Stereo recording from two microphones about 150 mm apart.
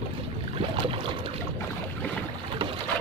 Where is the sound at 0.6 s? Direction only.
40° right (ahead or behind).